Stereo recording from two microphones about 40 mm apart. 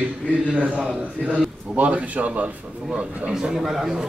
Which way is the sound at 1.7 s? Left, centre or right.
Right.